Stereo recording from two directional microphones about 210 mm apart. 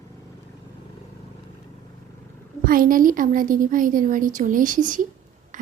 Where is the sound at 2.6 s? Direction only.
40° right (ahead or behind).